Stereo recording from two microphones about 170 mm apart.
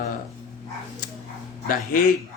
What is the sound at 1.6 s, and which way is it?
Speech, 55° left (ahead or behind).